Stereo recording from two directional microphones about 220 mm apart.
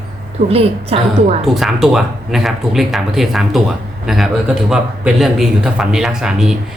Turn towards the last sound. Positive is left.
turn(degrees=-5)  # may be behind; listen again after turning